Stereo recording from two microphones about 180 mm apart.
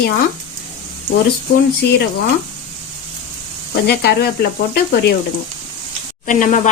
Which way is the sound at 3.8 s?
65° left (ahead or behind).